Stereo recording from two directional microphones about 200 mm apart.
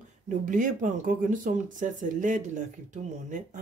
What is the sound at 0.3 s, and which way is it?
Speech, 40° right (ahead or behind).